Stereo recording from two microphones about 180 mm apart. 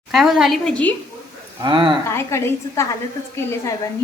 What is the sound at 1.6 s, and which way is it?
Speech, 25° right (ahead or behind).